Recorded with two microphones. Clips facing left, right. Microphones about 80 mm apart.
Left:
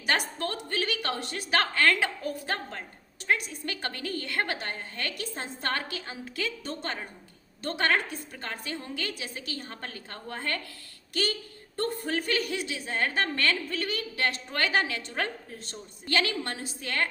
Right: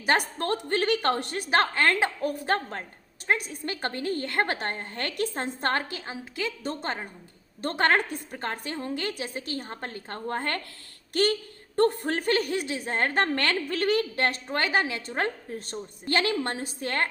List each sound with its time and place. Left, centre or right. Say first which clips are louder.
0.0 s a woman's voice: right 4 dB; right
1.5 s a woman's voice: right 1 dB; right
2.2 s a woman's voice: right 6 dB; right
3.2 s a woman's voice: right 1 dB; right
5.6 s a woman's voice: right 3 dB; right
6.7 s a woman's voice: right 3 dB; right
13.3 s a woman's voice: right 2 dB; right
14.2 s a woman's voice: right 3 dB; right
14.5 s a woman's voice: even; right